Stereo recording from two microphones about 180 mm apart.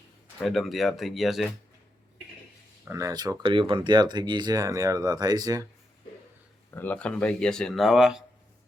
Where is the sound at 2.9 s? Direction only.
20° right (ahead or behind).